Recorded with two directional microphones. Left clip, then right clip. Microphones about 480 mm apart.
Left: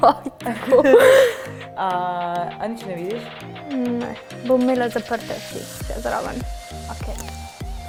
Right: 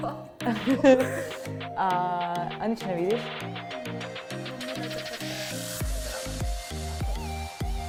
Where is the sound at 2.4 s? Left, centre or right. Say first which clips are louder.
Left 4 dB; right.